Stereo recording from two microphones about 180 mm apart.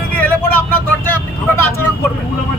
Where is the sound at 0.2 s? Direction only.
10° left (ahead or behind).